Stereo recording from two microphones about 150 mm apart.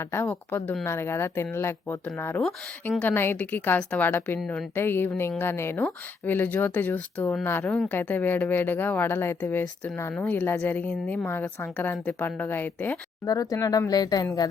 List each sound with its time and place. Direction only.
0.0 s speech: 15° left (ahead or behind)
13.2 s speech: 25° left (ahead or behind)